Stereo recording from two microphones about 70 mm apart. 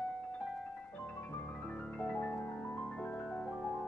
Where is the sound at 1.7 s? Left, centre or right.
Centre.